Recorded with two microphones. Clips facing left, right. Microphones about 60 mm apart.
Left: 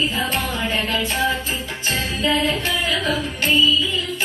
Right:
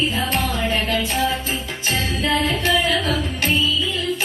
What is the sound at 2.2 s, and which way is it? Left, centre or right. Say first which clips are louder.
Music: even; right.